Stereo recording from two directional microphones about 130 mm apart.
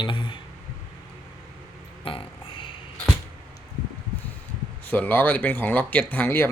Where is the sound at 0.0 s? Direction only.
40° left (ahead or behind).